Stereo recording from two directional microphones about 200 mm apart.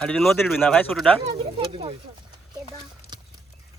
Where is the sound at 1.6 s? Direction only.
25° right (ahead or behind).